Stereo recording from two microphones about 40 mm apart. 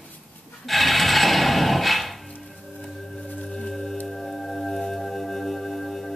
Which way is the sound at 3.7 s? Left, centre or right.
Centre.